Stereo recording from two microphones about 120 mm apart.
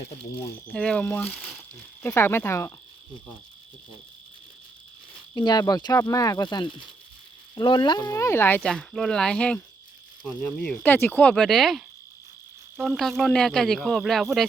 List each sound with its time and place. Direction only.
0.7 s speech: 10° left (ahead or behind)
2.0 s speech: 20° left (ahead or behind)
5.3 s speech: 35° left (ahead or behind)
8.1 s speech: 25° left (ahead or behind)
8.6 s speech: 5° left (ahead or behind)
12.8 s speech: 5° left (ahead or behind)